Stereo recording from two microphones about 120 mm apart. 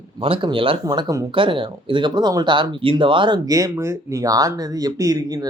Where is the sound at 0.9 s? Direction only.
30° right (ahead or behind).